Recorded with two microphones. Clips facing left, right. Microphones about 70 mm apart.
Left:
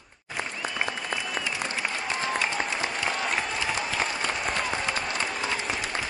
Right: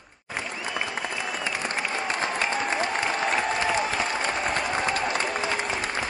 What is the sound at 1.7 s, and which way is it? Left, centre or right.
Applause, right.